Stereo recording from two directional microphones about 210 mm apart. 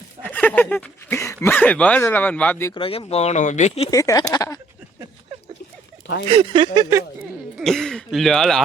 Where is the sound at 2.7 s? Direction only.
25° left (ahead or behind).